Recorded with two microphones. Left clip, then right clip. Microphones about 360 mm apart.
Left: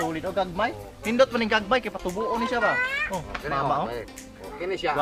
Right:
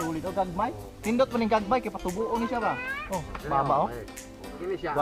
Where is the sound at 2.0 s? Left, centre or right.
Centre.